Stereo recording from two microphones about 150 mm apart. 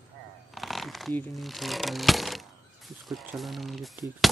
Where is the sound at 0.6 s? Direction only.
Centre (ahead or behind).